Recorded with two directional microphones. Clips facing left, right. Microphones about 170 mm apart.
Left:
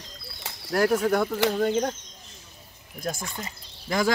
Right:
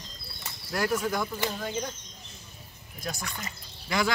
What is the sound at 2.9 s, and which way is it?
Speech, 50° left (ahead or behind).